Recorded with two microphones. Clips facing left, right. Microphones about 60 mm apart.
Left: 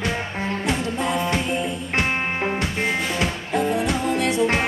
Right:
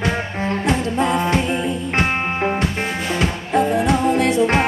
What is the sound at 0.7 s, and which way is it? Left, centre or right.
Music, right.